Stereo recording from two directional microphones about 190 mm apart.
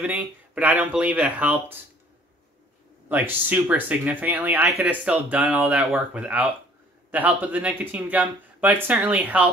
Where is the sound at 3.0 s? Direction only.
10° right (ahead or behind).